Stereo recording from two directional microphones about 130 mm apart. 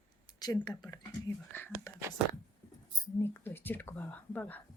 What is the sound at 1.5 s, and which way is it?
Speech, 15° left (ahead or behind).